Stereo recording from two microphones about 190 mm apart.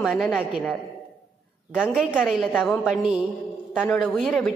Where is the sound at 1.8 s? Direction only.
5° right (ahead or behind).